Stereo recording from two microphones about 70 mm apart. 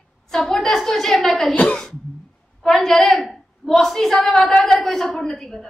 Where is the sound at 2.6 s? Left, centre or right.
Centre.